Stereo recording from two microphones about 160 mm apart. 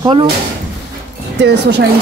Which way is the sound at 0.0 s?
30° right (ahead or behind).